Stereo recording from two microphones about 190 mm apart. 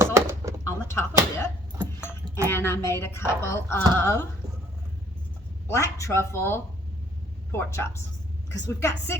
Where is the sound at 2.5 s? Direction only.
10° left (ahead or behind).